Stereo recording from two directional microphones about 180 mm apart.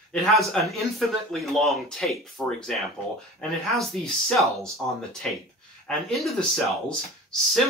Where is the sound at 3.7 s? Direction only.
Centre (ahead or behind).